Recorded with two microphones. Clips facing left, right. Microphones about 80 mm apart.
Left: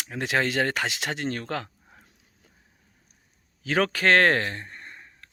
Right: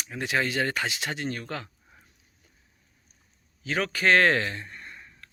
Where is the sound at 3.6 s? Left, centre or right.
Left.